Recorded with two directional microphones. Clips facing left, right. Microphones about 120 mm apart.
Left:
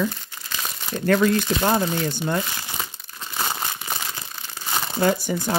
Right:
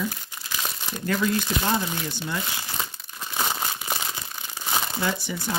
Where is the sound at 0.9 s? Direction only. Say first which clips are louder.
Left 6 dB; 55° left (ahead or behind).